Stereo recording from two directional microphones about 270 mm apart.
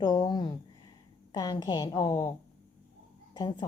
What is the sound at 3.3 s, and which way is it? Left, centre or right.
Speech, centre.